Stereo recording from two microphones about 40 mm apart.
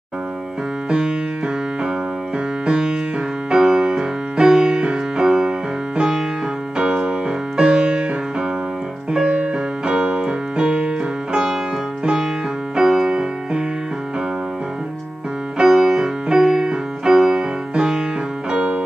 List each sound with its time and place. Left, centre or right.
0.8 s music: right
9.2 s keyboard: right
12.0 s music: centre
15.5 s music: centre
18.5 s keyboard: right